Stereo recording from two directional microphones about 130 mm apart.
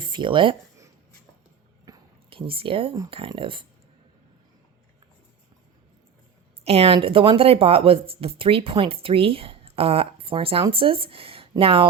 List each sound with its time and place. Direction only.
0.0 s speech: 40° right (ahead or behind)
2.3 s speech: 45° right (ahead or behind)
6.7 s speech: 45° right (ahead or behind)